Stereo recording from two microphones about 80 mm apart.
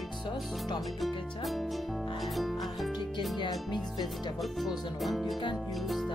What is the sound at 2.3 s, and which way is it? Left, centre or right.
Music, centre.